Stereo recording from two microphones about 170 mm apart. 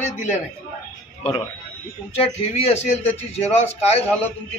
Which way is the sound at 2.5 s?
40° left (ahead or behind).